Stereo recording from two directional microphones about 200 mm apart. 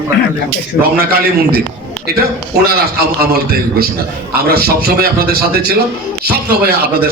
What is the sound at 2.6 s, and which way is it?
A man's voice, 50° right (ahead or behind).